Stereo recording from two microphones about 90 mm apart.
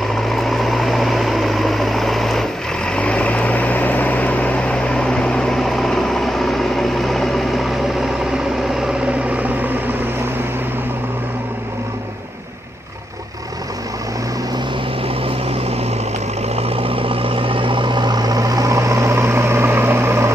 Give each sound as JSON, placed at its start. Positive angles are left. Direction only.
{"t": 0.3, "sound": "vehicle", "side_deg": 0}
{"t": 16.6, "sound": "vehicle", "side_deg": -90}